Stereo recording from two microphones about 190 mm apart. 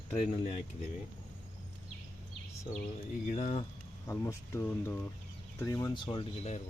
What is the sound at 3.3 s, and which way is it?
Speech, 40° left (ahead or behind).